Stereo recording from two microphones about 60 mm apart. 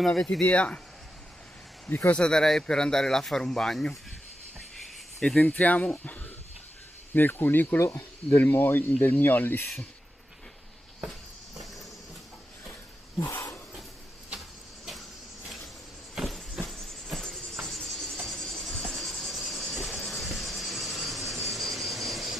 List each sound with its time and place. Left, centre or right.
0.0 s speech: centre
2.1 s speech: centre
5.4 s speech: left
13.3 s a sound: left
16.2 s vehicle: centre
16.6 s music: centre
17.6 s cricket: centre